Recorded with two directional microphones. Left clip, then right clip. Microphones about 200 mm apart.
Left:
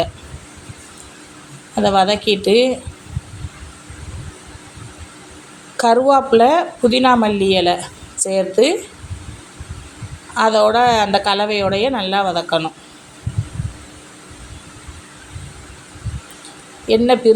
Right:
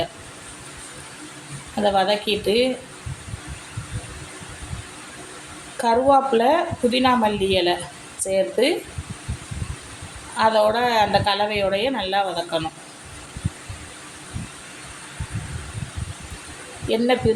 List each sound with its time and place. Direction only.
1.7 s speech: 40° left (ahead or behind)
5.7 s speech: 40° left (ahead or behind)
10.3 s speech: 40° left (ahead or behind)
16.9 s speech: 45° left (ahead or behind)